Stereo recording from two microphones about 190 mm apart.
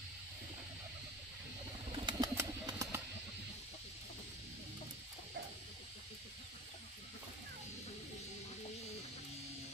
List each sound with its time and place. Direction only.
1.9 s bird: 20° right (ahead or behind)